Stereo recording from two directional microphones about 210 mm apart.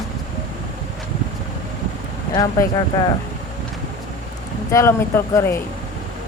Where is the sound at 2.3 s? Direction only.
15° left (ahead or behind).